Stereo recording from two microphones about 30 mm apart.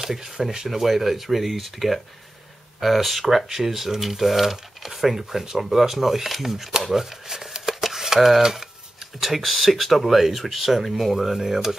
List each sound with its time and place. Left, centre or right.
0.4 s speech: centre
5.6 s speech: centre
6.8 s shuffling cards: centre
9.4 s speech: centre